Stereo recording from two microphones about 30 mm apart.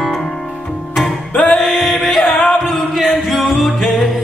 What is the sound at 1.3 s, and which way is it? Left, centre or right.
Music, left.